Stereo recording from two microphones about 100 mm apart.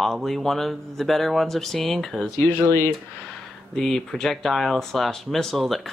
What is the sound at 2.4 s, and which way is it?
Speech, 25° left (ahead or behind).